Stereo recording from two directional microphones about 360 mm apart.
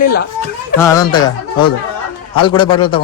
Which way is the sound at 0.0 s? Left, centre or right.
Left.